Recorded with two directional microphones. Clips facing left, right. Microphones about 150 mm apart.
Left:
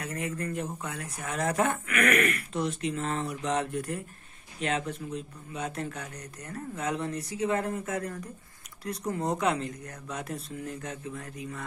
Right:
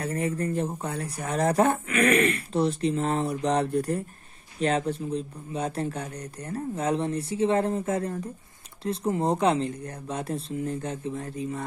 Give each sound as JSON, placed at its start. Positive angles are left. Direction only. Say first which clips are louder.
{"t": 0.0, "sound": "speech", "louder": "right 6 dB", "side_deg": -35}